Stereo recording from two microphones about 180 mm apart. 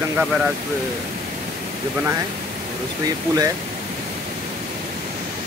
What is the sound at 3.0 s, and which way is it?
Speech, 20° right (ahead or behind).